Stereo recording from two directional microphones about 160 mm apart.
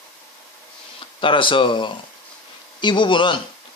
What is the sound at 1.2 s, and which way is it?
Speech, 30° left (ahead or behind).